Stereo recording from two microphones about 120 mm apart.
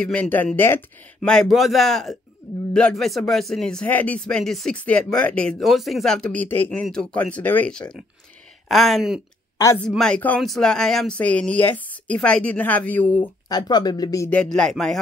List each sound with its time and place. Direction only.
0.0 s speech: 10° left (ahead or behind)
1.2 s a man's voice: 5° left (ahead or behind)
8.6 s a man's voice: centre (ahead or behind)
13.5 s speech: 35° left (ahead or behind)
14.3 s a man's voice: 5° left (ahead or behind)